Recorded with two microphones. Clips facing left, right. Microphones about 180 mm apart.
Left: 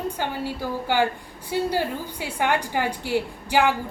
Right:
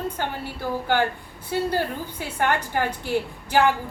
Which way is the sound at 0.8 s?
10° left (ahead or behind).